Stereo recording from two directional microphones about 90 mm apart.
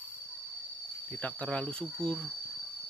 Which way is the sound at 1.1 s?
20° left (ahead or behind).